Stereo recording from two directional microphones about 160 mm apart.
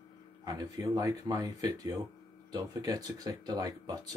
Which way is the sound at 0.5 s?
20° right (ahead or behind).